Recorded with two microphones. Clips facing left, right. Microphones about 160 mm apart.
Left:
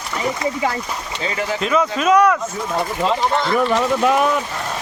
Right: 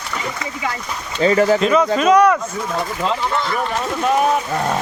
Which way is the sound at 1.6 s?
Centre (ahead or behind).